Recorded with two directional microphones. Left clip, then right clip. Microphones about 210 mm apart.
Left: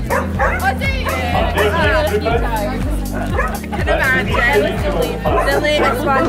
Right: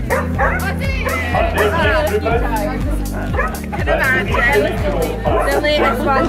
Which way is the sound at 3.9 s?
20° left (ahead or behind).